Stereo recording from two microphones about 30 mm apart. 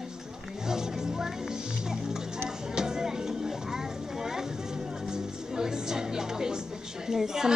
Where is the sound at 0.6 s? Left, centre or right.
Centre.